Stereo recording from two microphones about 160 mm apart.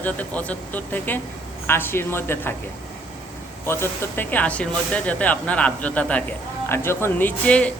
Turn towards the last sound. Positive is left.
turn(degrees=5)  # may be behind; listen again after turning